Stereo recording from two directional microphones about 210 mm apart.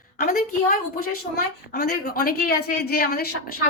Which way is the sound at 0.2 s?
45° left (ahead or behind).